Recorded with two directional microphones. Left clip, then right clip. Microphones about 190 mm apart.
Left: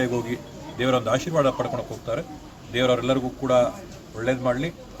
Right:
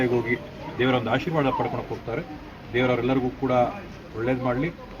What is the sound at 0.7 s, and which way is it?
Speech, 35° left (ahead or behind).